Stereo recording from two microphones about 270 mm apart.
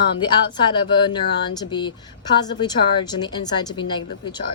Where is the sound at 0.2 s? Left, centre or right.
Centre.